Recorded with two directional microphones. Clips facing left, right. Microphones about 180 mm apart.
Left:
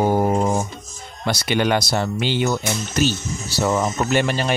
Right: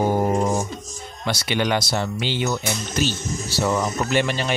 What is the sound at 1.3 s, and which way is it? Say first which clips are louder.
Speech: left 3 dB; 50° left (ahead or behind).